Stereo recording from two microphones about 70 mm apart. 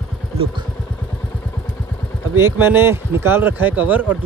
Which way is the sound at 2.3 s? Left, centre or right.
Right.